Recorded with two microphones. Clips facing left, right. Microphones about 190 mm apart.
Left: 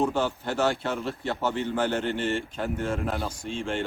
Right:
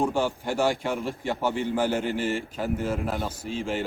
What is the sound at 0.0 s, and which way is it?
A man's voice, 10° right (ahead or behind).